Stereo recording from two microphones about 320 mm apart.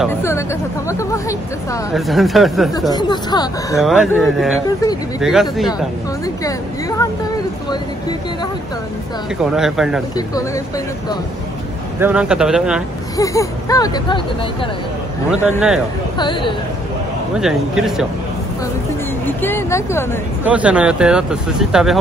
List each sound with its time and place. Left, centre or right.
0.0 s speech: centre
2.9 s speech: centre
3.8 s speech: centre
6.2 s speech: centre
9.4 s speech: centre
10.1 s speech: centre
12.0 s speech: centre
13.2 s speech: centre
15.5 s speech: centre
16.2 s speech: centre
17.4 s speech: centre
19.2 s speech: centre
20.4 s speech: centre